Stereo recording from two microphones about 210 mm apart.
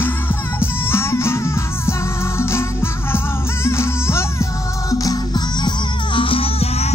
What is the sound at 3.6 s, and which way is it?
Music, 10° left (ahead or behind).